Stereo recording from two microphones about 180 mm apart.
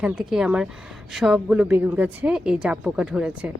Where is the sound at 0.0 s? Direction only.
5° right (ahead or behind).